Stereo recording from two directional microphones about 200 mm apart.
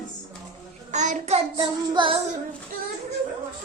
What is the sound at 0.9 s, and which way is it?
Child singing, 35° right (ahead or behind).